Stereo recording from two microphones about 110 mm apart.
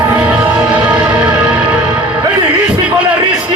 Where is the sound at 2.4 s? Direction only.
10° right (ahead or behind).